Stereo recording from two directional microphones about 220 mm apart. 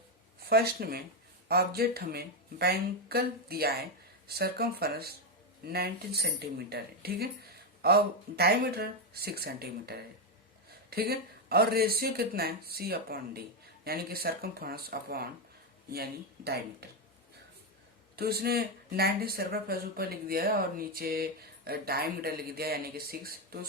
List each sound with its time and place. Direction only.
0.4 s speech: 45° right (ahead or behind)
18.2 s speech: 45° right (ahead or behind)